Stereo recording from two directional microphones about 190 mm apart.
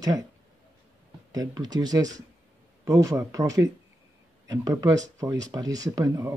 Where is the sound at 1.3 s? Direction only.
20° right (ahead or behind).